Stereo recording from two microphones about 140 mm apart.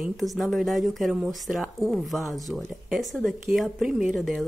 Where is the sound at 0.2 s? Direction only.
Centre (ahead or behind).